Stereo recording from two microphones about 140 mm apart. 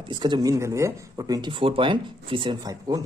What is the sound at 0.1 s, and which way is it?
Speech, 30° right (ahead or behind).